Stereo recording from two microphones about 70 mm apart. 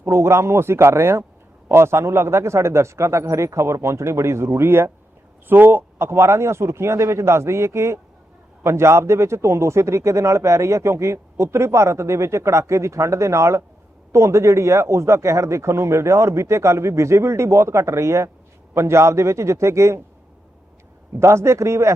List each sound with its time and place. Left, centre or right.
0.0 s a man's voice: right
21.2 s speech: right